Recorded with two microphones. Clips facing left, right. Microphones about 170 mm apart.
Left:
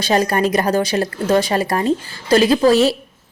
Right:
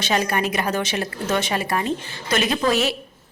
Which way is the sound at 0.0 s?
40° left (ahead or behind).